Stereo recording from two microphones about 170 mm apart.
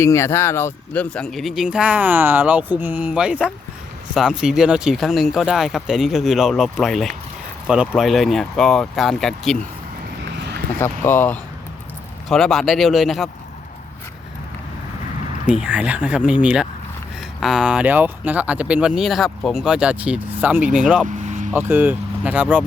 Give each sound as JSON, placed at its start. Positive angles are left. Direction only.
{"t": 0.0, "sound": "speech", "side_deg": 15}
{"t": 10.3, "sound": "a sound", "side_deg": -80}
{"t": 10.8, "sound": "speech", "side_deg": 15}
{"t": 15.6, "sound": "speech", "side_deg": -5}
{"t": 21.2, "sound": "vehicle", "side_deg": -45}
{"t": 21.5, "sound": "speech", "side_deg": -10}